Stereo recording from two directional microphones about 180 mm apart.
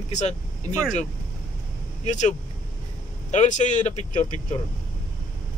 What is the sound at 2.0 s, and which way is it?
A man's voice, 40° left (ahead or behind).